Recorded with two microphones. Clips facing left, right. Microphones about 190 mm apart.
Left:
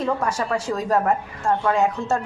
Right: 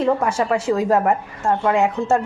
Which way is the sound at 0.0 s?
25° right (ahead or behind).